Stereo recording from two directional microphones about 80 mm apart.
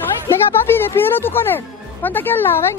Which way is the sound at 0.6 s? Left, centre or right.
Left.